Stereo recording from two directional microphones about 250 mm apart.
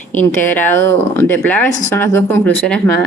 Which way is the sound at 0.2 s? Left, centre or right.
Centre.